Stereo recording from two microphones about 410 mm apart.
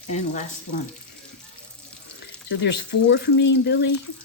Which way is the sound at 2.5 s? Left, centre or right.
Left.